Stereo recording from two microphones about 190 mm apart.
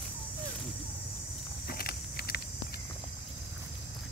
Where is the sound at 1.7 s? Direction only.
55° left (ahead or behind).